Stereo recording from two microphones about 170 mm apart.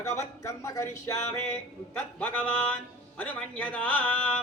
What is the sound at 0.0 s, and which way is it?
A man's voice, 15° left (ahead or behind).